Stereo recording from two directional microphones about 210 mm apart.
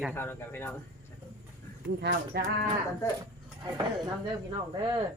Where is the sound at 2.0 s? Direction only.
50° right (ahead or behind).